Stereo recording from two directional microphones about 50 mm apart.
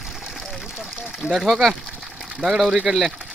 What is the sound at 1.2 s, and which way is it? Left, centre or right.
Speech, centre.